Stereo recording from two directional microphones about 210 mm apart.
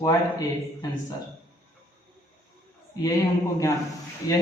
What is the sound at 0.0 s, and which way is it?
Speech, 15° left (ahead or behind).